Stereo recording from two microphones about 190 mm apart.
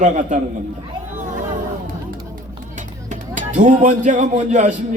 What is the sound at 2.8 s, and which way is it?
Speech, 40° right (ahead or behind).